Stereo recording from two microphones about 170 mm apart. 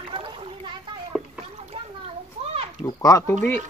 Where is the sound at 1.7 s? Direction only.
35° right (ahead or behind).